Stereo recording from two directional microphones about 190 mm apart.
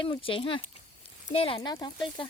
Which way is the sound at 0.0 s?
25° left (ahead or behind).